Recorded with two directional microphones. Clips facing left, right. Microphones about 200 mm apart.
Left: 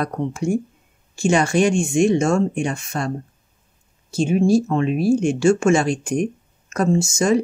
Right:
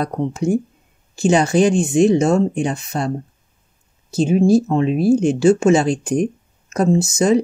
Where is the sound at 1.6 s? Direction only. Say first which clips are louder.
Right 4 dB; 35° right (ahead or behind).